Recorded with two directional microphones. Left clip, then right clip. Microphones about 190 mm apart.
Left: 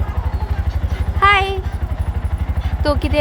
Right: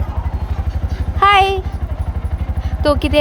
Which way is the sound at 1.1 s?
20° right (ahead or behind).